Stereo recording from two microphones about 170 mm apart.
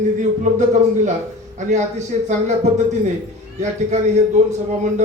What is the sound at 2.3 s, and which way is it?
Speech, 45° right (ahead or behind).